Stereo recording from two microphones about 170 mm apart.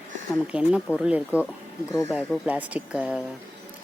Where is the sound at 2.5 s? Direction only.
10° right (ahead or behind).